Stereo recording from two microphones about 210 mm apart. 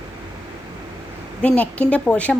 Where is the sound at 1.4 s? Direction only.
5° left (ahead or behind).